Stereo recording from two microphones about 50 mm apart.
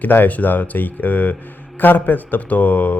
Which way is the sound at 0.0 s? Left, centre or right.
Left.